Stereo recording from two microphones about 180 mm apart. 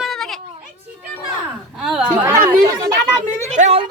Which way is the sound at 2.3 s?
20° right (ahead or behind).